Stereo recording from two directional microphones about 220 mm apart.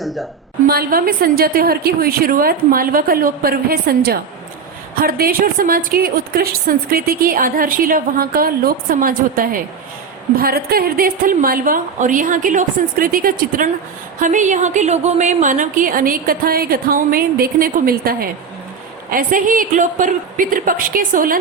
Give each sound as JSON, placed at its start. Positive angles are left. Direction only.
{"t": 0.0, "sound": "a woman's voice", "side_deg": 0}
{"t": 0.7, "sound": "a woman's voice", "side_deg": -40}